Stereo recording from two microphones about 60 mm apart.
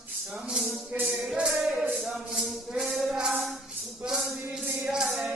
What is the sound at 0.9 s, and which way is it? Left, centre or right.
Music, right.